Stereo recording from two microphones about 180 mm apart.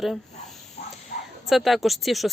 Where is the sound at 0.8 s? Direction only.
35° left (ahead or behind).